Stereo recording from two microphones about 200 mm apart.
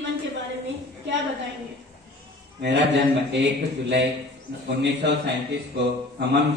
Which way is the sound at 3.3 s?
60° right (ahead or behind).